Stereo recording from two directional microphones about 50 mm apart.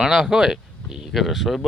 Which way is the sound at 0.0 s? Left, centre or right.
Centre.